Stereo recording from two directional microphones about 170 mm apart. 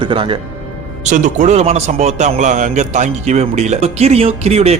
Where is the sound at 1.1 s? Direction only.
45° right (ahead or behind).